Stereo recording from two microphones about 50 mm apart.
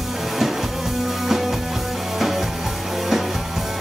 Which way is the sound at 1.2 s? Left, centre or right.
Centre.